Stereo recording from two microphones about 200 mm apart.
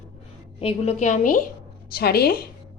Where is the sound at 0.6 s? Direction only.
30° left (ahead or behind).